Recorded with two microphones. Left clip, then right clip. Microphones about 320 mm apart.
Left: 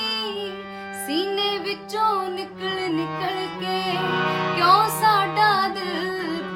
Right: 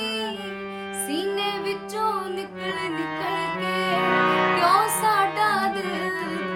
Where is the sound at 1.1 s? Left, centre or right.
Centre.